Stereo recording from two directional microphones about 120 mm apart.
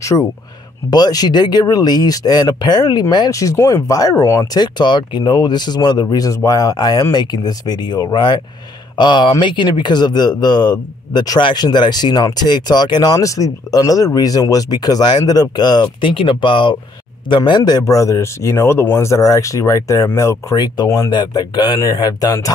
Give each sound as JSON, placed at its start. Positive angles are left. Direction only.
{"t": 0.0, "sound": "speech", "side_deg": 25}
{"t": 4.6, "sound": "a man's voice", "side_deg": 40}